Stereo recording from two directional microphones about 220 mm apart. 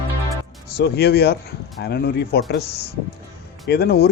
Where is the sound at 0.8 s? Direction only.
45° left (ahead or behind).